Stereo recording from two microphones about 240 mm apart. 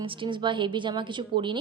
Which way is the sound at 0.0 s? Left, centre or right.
Right.